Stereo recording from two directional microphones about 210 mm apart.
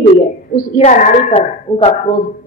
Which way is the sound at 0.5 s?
35° left (ahead or behind).